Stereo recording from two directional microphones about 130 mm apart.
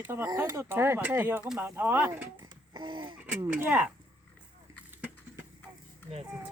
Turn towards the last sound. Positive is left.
turn(degrees=-55)  # may be behind; listen again after turning